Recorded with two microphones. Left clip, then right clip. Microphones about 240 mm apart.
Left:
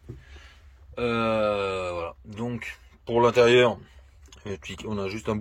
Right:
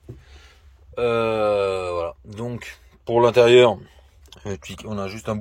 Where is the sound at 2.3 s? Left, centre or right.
Right.